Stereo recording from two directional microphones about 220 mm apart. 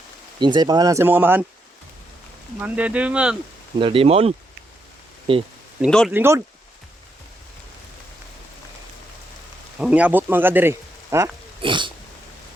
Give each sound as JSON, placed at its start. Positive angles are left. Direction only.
{"t": 0.3, "sound": "speech", "side_deg": -20}
{"t": 2.6, "sound": "speech", "side_deg": -5}
{"t": 3.8, "sound": "speech", "side_deg": -25}
{"t": 5.8, "sound": "speech", "side_deg": 0}
{"t": 6.1, "sound": "speech", "side_deg": -10}
{"t": 9.7, "sound": "speech", "side_deg": -5}